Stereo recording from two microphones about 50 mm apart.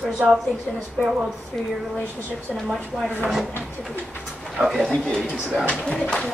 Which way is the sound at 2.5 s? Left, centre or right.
Centre.